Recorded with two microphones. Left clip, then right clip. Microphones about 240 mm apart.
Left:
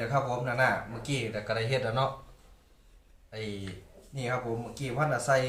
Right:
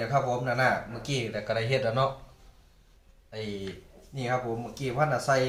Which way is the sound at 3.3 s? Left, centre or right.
Centre.